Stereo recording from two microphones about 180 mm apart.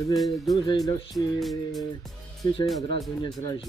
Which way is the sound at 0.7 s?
20° left (ahead or behind).